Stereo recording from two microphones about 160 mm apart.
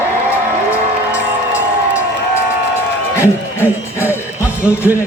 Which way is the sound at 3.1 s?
15° right (ahead or behind).